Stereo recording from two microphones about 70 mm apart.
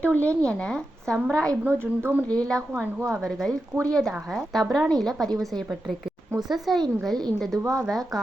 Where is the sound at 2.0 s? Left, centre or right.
Right.